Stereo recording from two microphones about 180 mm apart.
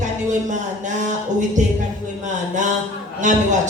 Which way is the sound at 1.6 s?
40° right (ahead or behind).